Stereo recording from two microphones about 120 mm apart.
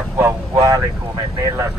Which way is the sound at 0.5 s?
35° right (ahead or behind).